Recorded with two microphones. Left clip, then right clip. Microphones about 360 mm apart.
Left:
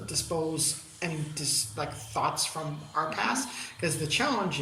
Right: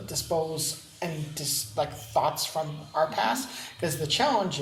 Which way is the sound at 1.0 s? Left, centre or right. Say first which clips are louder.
Right 1 dB; right.